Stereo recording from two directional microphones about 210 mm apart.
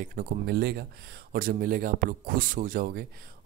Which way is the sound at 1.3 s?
45° right (ahead or behind).